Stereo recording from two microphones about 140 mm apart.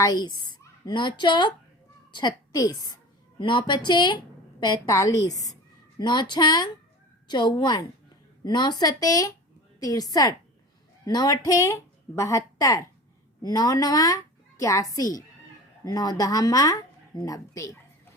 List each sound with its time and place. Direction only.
0.0 s a woman's voice: 30° left (ahead or behind)